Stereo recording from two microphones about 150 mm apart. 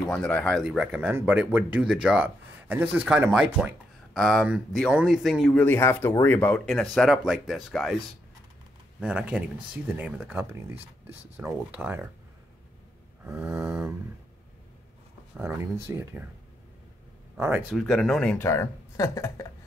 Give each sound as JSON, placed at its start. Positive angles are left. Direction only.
{"t": 0.1, "sound": "speech", "side_deg": 10}
{"t": 0.7, "sound": "speech", "side_deg": -5}
{"t": 5.6, "sound": "speech", "side_deg": 15}
{"t": 9.0, "sound": "speech", "side_deg": -10}
{"t": 13.2, "sound": "speech", "side_deg": -10}
{"t": 15.4, "sound": "speech", "side_deg": -15}
{"t": 17.4, "sound": "speech", "side_deg": -10}
{"t": 17.7, "sound": "speech", "side_deg": 0}
{"t": 18.4, "sound": "speech", "side_deg": 15}